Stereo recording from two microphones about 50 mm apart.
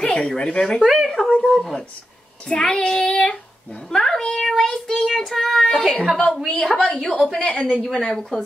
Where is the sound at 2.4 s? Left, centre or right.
Centre.